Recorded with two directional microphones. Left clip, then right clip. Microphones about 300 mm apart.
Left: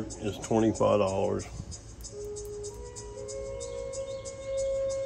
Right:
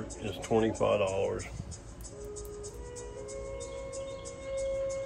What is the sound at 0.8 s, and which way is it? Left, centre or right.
Speech, left.